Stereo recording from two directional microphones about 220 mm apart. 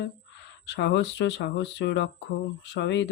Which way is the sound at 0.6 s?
50° left (ahead or behind).